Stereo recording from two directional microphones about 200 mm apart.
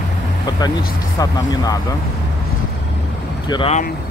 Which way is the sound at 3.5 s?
30° left (ahead or behind).